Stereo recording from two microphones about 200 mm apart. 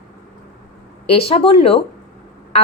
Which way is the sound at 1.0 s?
30° left (ahead or behind).